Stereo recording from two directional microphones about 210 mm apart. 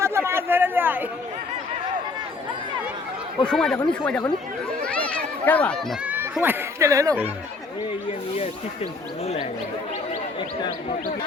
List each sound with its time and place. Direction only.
0.0 s a sound: 10° right (ahead or behind)
3.4 s speech: 5° left (ahead or behind)
4.8 s a sound: 5° left (ahead or behind)
6.1 s speech: 10° right (ahead or behind)
8.4 s speech: 30° left (ahead or behind)
10.6 s speech: 20° left (ahead or behind)